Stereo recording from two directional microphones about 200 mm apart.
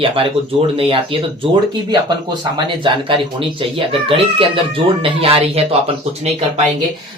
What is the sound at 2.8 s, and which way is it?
Speech, 25° right (ahead or behind).